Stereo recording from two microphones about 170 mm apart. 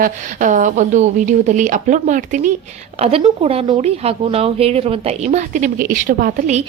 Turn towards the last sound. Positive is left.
turn(degrees=-45)  # may be behind; listen again after turning